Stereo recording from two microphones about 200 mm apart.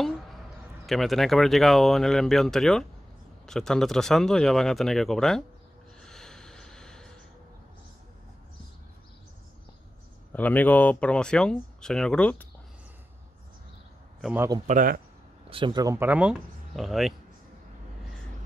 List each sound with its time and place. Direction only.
0.8 s speech: centre (ahead or behind)
5.9 s snort: 5° left (ahead or behind)
10.3 s speech: 10° left (ahead or behind)
14.2 s speech: 10° right (ahead or behind)
14.7 s speech: 45° right (ahead or behind)
15.5 s speech: 20° right (ahead or behind); by 17.1 s centre (ahead or behind)